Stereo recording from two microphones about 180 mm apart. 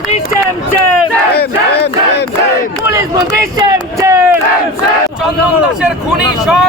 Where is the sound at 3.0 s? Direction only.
25° right (ahead or behind).